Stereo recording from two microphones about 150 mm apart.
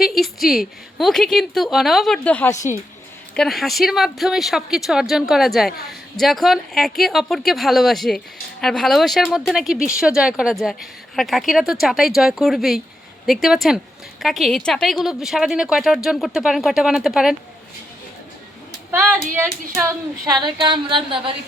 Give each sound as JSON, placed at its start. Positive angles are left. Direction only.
{"t": 0.0, "sound": "a woman's voice", "side_deg": 0}
{"t": 2.5, "sound": "a woman's voice", "side_deg": 20}
{"t": 3.3, "sound": "a woman's voice", "side_deg": 0}
{"t": 18.9, "sound": "a woman's voice", "side_deg": -10}
{"t": 20.4, "sound": "a sound", "side_deg": -30}